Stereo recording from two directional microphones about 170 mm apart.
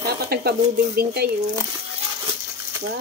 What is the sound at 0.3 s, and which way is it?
Speech, 65° right (ahead or behind).